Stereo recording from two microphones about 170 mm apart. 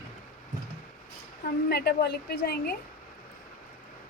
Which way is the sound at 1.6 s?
70° left (ahead or behind).